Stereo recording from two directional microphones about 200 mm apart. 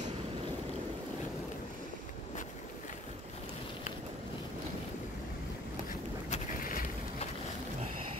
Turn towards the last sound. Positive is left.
turn(degrees=45)  # may be behind; listen again after turning